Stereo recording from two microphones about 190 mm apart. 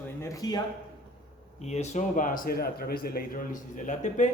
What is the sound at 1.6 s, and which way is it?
Speech, 35° left (ahead or behind).